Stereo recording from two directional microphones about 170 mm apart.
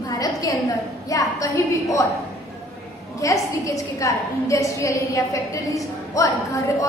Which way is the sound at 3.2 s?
20° left (ahead or behind).